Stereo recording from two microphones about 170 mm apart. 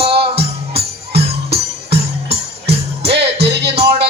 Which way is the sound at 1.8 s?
35° right (ahead or behind).